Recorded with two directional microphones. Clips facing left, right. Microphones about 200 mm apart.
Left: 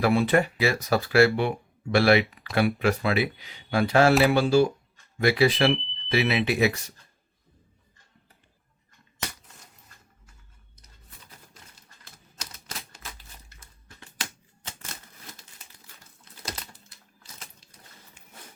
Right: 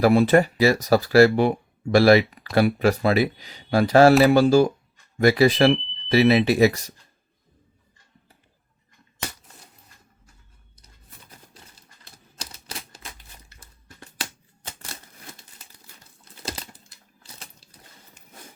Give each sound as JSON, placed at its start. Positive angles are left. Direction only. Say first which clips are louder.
{"t": 0.0, "sound": "speech", "louder": "right 5 dB", "side_deg": -40}
{"t": 5.7, "sound": "speech", "louder": "right 3 dB", "side_deg": 0}
{"t": 6.1, "sound": "speech", "louder": "right 7 dB", "side_deg": -35}
{"t": 12.4, "sound": "typewriter", "louder": "right 3 dB", "side_deg": -30}